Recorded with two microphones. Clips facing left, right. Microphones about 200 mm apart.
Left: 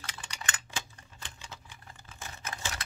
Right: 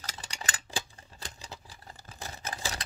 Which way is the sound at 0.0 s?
40° right (ahead or behind).